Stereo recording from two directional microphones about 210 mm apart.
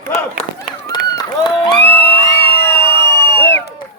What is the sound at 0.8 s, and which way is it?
Run, 20° left (ahead or behind).